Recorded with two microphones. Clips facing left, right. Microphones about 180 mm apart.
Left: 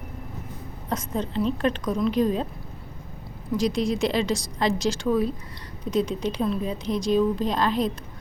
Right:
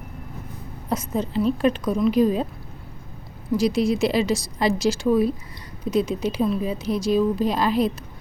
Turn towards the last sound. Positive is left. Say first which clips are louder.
# right 3 dB
turn(degrees=-10)  # may be behind; listen again after turning